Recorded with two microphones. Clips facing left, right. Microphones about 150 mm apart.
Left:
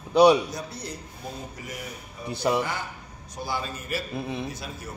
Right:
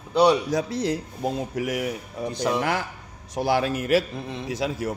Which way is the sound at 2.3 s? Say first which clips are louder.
Left 1 dB; 10° left (ahead or behind).